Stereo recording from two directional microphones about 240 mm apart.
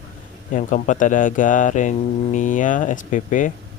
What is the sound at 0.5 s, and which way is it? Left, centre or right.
Speech, left.